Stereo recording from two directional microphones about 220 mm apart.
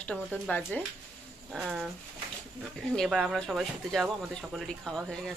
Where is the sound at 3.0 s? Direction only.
Centre (ahead or behind).